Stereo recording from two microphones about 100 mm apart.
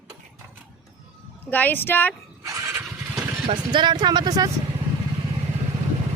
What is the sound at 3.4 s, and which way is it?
Speech, 50° right (ahead or behind).